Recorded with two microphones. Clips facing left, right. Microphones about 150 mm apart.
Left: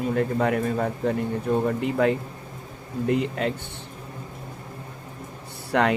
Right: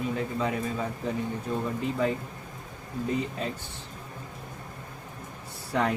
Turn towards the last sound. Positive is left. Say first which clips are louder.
# left 5 dB
turn(degrees=70)  # may be behind; listen again after turning